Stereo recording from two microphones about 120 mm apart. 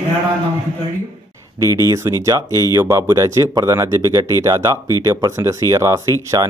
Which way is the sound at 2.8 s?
20° right (ahead or behind).